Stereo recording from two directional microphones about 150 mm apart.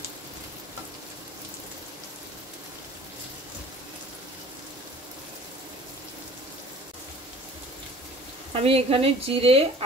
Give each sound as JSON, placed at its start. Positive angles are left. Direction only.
{"t": 8.5, "sound": "speech", "side_deg": -40}